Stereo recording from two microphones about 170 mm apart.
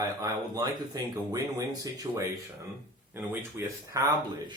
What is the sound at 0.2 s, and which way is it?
Speech, 20° right (ahead or behind).